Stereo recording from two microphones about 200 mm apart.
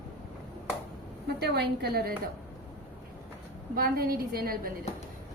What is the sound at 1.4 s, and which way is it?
Speech, 55° right (ahead or behind).